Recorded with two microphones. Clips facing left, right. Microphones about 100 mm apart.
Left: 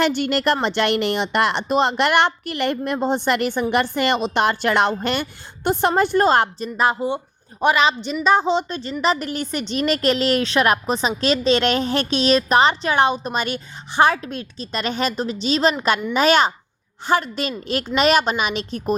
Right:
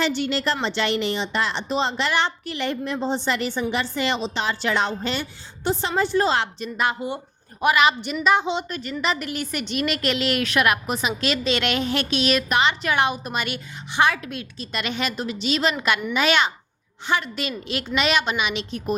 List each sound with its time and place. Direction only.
0.0 s a woman's voice: 55° left (ahead or behind); by 18.9 s 40° left (ahead or behind)